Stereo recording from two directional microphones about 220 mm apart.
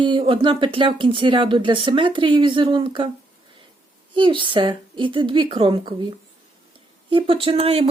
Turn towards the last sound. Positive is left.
turn(degrees=-25)  # may be behind; listen again after turning